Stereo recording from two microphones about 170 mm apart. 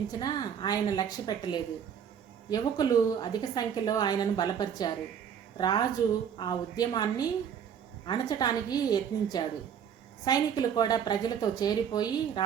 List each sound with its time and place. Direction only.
0.1 s a woman's voice: 25° left (ahead or behind)